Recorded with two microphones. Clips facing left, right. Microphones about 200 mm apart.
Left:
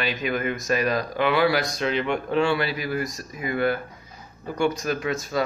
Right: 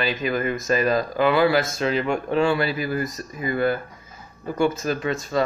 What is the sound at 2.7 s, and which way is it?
Speech, 5° left (ahead or behind).